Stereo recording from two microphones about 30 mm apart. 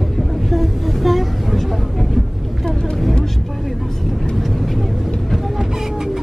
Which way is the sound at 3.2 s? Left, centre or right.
Centre.